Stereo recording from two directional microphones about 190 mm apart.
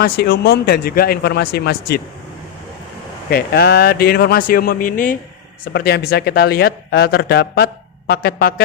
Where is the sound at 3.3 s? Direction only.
55° left (ahead or behind).